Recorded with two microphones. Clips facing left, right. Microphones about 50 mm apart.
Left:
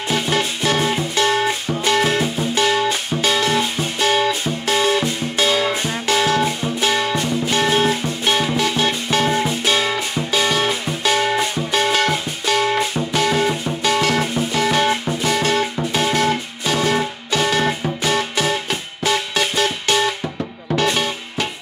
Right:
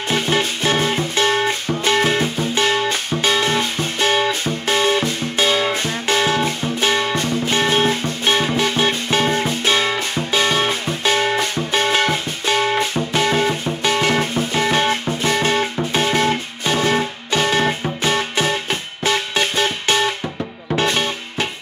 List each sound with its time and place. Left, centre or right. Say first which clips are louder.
0.1 s music: right 1 dB; right
6.4 s music: even; right